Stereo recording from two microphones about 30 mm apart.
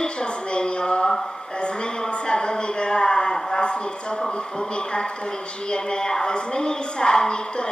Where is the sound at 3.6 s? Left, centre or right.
Left.